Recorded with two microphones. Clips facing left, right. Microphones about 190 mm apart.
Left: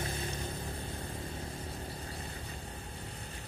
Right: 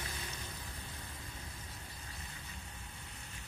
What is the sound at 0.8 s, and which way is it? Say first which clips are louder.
Vehicle: left 9 dB; 35° left (ahead or behind).